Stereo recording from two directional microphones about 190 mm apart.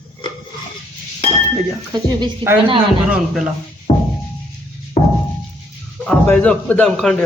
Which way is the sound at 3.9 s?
25° left (ahead or behind).